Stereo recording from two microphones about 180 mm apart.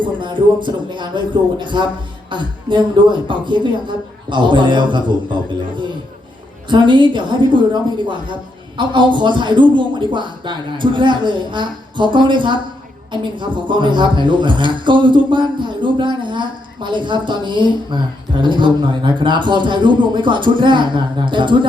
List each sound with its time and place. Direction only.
0.0 s speech: 25° right (ahead or behind)
6.7 s speech: 25° right (ahead or behind)